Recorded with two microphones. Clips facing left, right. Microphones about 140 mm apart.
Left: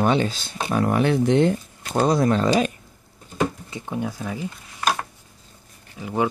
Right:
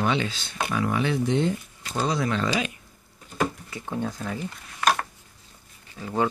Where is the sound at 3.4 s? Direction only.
20° left (ahead or behind).